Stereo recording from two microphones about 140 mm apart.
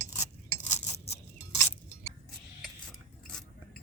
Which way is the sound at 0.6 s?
50° left (ahead or behind).